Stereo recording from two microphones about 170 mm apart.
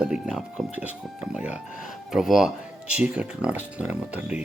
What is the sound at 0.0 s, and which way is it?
Speech, 5° right (ahead or behind).